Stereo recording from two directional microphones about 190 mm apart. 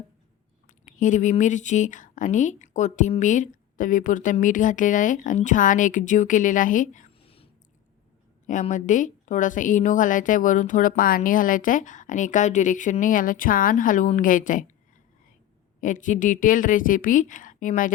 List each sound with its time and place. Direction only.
0.7 s speech: 40° left (ahead or behind)
7.3 s a sound: 30° left (ahead or behind)
8.4 s speech: 40° left (ahead or behind)
15.8 s speech: 45° left (ahead or behind)